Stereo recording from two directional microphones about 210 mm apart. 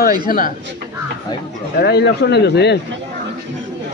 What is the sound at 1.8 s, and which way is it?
Speech, 50° left (ahead or behind).